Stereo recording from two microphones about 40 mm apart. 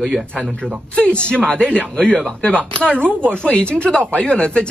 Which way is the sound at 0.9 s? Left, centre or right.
Left.